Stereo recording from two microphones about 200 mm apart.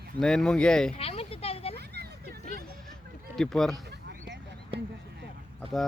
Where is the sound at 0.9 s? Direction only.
30° left (ahead or behind).